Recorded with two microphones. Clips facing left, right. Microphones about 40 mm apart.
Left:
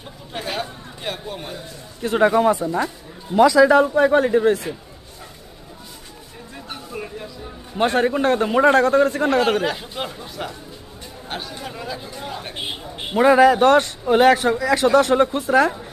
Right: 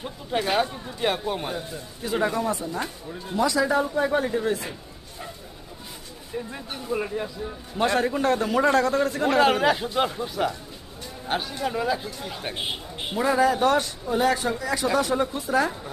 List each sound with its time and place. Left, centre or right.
0.3 s speech: centre
2.3 s a man's voice: left
3.3 s a man's voice: left
3.9 s a man's voice: left
6.5 s speech: centre
7.8 s a man's voice: left
9.4 s speech: centre
13.1 s speech: left
14.1 s a man's voice: left
14.9 s speech: left